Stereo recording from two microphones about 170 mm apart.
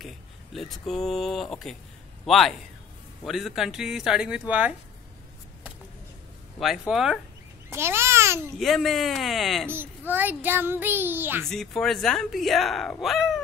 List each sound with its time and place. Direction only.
0.0 s a man's voice: centre (ahead or behind)
6.6 s speech: centre (ahead or behind)
7.7 s a child's voice: 15° right (ahead or behind)
8.5 s speech: centre (ahead or behind)
9.7 s a child's voice: 10° right (ahead or behind)
11.4 s speech: centre (ahead or behind)